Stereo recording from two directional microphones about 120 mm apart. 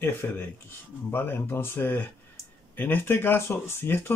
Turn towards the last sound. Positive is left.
turn(degrees=20)  # may be behind; listen again after turning